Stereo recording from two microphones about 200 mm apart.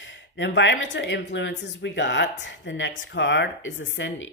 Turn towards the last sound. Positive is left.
turn(degrees=70)  # may be behind; listen again after turning